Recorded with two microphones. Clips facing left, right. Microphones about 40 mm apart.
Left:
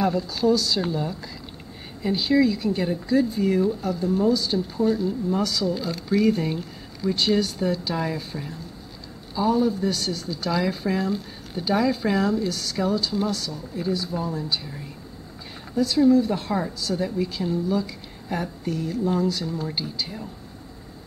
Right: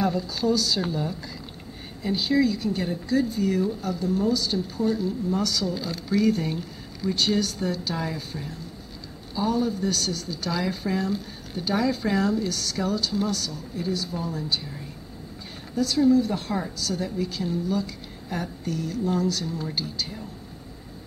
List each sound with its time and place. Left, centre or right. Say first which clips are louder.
0.0 s speech: left 3 dB; centre
3.6 s speech: left 3 dB; centre
15.7 s speech: left 2 dB; centre